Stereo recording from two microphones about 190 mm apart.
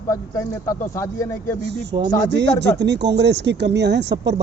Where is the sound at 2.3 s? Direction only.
65° right (ahead or behind).